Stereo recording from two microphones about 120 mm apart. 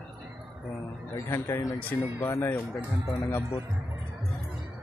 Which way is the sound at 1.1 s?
20° left (ahead or behind).